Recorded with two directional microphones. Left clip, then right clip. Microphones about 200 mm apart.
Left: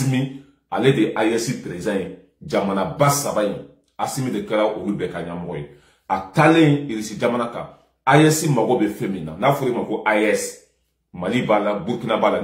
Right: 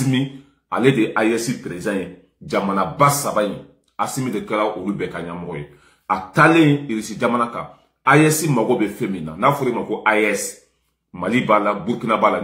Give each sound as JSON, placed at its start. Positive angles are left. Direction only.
{"t": 0.7, "sound": "a man's voice", "side_deg": 0}
{"t": 6.0, "sound": "a man's voice", "side_deg": 0}